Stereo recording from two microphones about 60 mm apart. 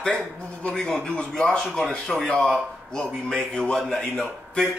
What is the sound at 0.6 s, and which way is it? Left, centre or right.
Speech, centre.